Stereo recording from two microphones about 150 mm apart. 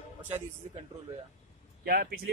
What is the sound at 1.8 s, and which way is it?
Speech, 80° right.